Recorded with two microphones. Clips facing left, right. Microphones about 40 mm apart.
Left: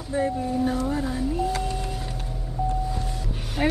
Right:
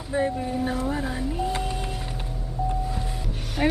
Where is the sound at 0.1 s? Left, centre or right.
Right.